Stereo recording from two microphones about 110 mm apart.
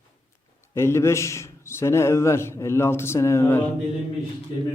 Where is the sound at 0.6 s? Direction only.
25° left (ahead or behind).